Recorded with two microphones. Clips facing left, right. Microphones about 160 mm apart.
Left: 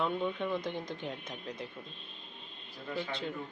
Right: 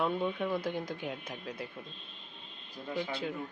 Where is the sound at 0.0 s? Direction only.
5° right (ahead or behind).